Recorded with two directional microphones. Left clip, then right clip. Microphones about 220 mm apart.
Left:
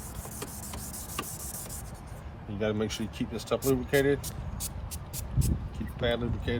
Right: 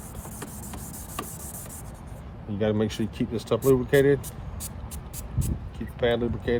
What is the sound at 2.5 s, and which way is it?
Speech, 45° right (ahead or behind).